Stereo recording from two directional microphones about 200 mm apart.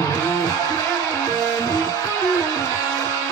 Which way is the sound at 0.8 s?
15° left (ahead or behind).